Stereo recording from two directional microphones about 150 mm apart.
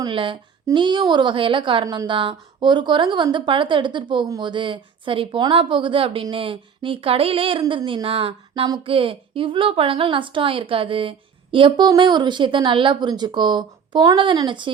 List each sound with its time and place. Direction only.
0.0 s a woman's voice: 35° right (ahead or behind)